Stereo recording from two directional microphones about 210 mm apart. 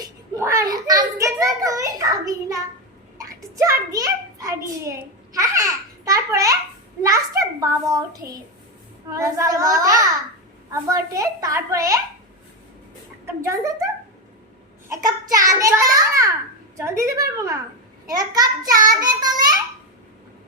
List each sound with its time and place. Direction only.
0.0 s a child's voice: 15° right (ahead or behind)
3.2 s a sound: 15° right (ahead or behind)
5.3 s a child's voice: 15° right (ahead or behind)
13.2 s a child's voice: 15° right (ahead or behind)
15.0 s a child's voice: 15° right (ahead or behind)
18.9 s child singing: 20° right (ahead or behind)